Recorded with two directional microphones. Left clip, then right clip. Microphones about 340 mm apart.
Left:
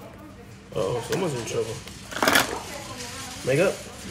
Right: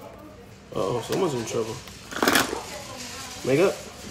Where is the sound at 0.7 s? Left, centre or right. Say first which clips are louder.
Even; centre.